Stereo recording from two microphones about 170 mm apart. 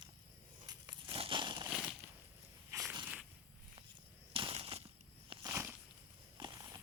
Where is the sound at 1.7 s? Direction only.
5° right (ahead or behind).